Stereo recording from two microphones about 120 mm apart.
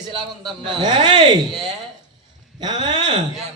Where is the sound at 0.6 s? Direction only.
40° right (ahead or behind).